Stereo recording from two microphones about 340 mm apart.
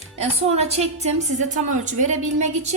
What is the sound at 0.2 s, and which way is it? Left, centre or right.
A woman's voice, centre.